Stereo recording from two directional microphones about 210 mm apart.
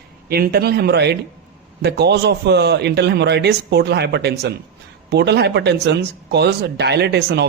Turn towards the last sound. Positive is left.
turn(degrees=-55)  # may be behind; listen again after turning